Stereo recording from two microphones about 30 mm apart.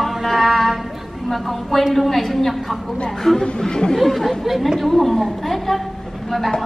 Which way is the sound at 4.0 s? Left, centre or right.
Centre.